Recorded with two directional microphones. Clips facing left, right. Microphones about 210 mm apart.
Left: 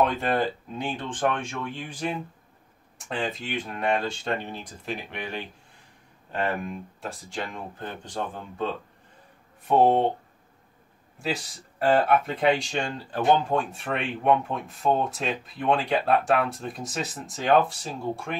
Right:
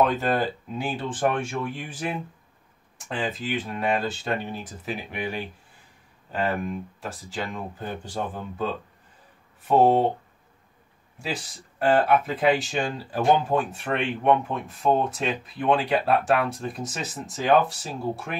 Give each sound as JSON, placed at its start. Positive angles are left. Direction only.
{"t": 0.0, "sound": "speech", "side_deg": 0}
{"t": 11.1, "sound": "speech", "side_deg": 0}